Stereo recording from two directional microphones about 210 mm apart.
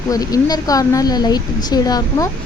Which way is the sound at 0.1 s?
15° left (ahead or behind).